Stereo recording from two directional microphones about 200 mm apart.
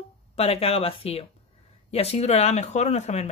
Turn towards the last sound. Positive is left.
turn(degrees=35)  # may be behind; listen again after turning